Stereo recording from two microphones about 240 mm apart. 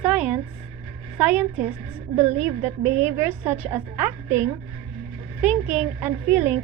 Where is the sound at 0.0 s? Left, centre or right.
Centre.